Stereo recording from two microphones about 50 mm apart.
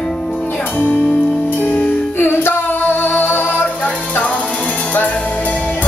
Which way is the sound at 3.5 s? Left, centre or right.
Left.